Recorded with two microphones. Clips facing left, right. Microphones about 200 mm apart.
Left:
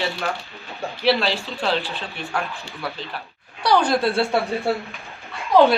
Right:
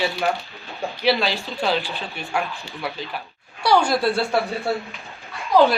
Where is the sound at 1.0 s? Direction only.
Centre (ahead or behind).